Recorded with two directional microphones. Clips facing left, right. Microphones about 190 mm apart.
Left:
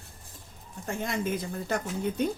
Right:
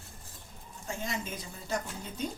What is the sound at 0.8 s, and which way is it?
Speech, 55° left (ahead or behind).